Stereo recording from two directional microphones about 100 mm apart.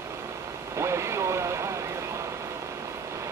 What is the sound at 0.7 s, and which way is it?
Vehicle, 30° right (ahead or behind).